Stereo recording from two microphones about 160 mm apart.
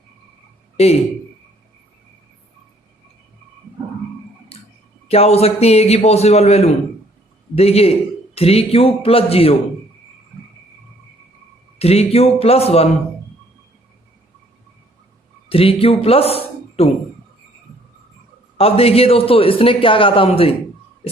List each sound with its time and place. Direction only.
0.8 s a man's voice: 40° left (ahead or behind)
5.0 s a man's voice: 40° left (ahead or behind)
11.8 s a man's voice: 40° left (ahead or behind)
15.4 s a man's voice: 35° left (ahead or behind)
18.5 s a man's voice: 40° left (ahead or behind)